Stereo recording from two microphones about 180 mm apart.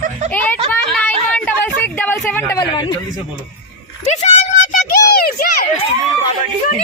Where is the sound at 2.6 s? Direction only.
25° left (ahead or behind).